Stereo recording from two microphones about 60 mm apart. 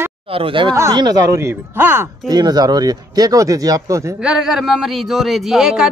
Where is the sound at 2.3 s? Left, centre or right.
Right.